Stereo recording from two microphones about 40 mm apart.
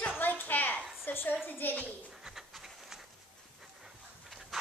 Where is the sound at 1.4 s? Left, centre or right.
Left.